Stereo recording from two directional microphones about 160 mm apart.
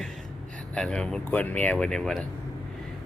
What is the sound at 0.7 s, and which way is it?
Speech, 5° left (ahead or behind).